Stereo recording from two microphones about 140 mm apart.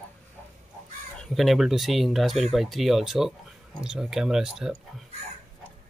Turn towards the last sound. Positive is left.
turn(degrees=-5)  # may be behind; listen again after turning